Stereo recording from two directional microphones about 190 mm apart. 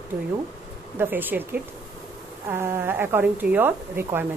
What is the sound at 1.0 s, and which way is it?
Speech, 10° right (ahead or behind).